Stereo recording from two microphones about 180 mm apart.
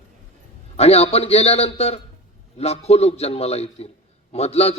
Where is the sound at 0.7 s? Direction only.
35° left (ahead or behind).